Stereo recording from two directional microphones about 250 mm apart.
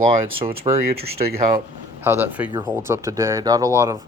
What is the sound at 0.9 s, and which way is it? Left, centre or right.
Speech, right.